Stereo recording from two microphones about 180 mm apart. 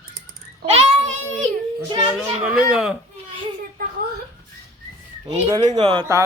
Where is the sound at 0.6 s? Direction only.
35° right (ahead or behind).